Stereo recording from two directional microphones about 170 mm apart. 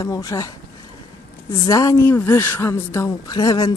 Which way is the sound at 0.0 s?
20° left (ahead or behind).